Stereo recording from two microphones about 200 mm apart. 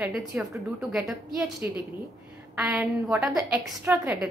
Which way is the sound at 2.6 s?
15° right (ahead or behind).